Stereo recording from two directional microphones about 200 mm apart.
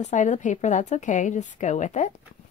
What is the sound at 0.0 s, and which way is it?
A woman's voice, 40° left (ahead or behind).